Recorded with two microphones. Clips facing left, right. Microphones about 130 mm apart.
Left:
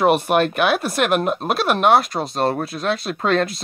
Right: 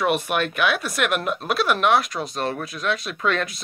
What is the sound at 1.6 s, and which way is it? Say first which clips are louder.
Speech: right 1 dB; 50° left (ahead or behind).